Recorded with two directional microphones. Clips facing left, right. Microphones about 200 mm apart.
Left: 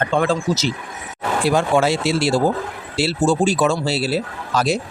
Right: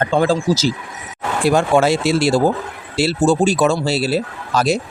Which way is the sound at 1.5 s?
45° right (ahead or behind).